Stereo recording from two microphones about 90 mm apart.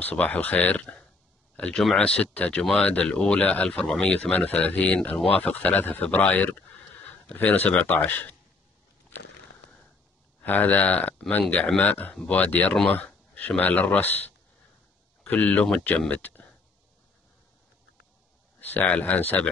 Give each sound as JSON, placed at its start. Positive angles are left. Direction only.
{"t": 0.0, "sound": "speech", "side_deg": 15}
{"t": 10.4, "sound": "speech", "side_deg": 20}
{"t": 12.4, "sound": "speech", "side_deg": 20}
{"t": 18.6, "sound": "speech", "side_deg": 20}